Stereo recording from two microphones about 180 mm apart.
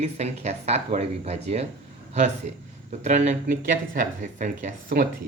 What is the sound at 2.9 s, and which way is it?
Speech, 40° right (ahead or behind).